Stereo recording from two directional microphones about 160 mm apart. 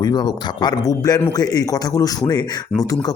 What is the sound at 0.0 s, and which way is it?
Speech, 25° left (ahead or behind).